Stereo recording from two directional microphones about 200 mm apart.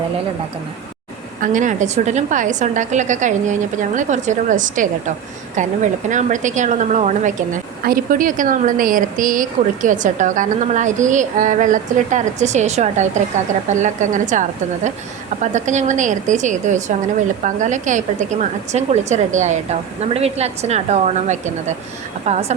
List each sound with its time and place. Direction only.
1.4 s a woman's voice: 40° right (ahead or behind)